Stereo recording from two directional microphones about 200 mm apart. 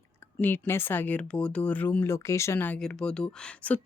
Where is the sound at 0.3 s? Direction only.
10° left (ahead or behind).